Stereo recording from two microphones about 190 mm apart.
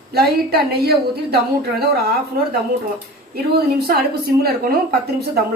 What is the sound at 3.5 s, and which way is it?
A woman's voice, 55° right (ahead or behind).